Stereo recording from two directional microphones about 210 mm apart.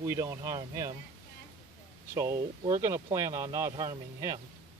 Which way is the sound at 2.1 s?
15° right (ahead or behind).